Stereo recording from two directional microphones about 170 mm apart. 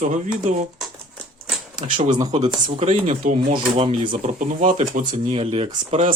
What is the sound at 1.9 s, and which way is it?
Speech, 50° right (ahead or behind).